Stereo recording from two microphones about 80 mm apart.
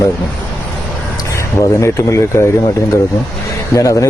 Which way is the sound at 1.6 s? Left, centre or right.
Left.